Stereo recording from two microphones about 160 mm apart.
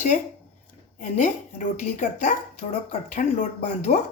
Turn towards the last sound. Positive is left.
turn(degrees=45)  # may be behind; listen again after turning